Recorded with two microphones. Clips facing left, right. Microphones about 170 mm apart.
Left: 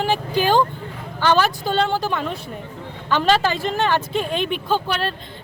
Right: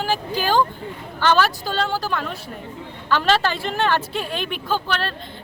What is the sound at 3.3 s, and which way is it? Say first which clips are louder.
Speech: left 2 dB; 10° left (ahead or behind).